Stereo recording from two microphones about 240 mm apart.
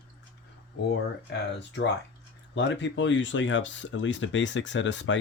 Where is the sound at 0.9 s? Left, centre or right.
Left.